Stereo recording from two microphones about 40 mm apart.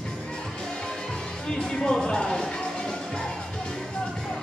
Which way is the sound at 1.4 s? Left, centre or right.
Centre.